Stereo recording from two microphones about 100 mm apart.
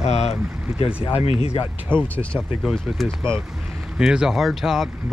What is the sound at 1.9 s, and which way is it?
Speech, 10° left (ahead or behind).